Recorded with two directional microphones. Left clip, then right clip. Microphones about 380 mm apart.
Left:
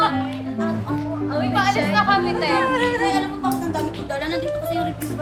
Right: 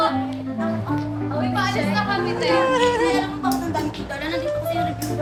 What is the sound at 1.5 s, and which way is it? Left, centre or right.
Music, centre.